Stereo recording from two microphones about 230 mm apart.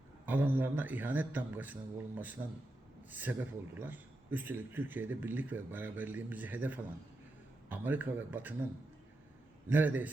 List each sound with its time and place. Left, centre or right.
0.3 s a man's voice: centre
9.6 s speech: centre